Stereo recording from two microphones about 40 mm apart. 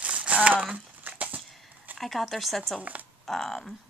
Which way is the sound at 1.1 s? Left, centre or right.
Right.